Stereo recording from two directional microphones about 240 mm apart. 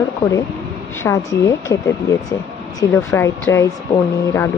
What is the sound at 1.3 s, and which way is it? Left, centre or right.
A woman's voice, centre.